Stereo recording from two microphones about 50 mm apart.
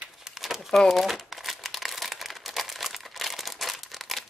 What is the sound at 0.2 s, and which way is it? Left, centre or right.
Crumpling, centre.